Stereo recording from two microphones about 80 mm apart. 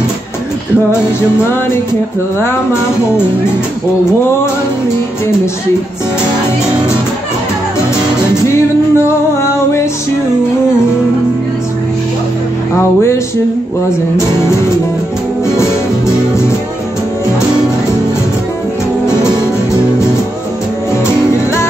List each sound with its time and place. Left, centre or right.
8.5 s music: left